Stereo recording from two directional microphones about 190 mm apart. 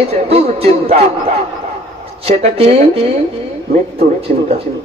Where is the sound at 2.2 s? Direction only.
30° right (ahead or behind).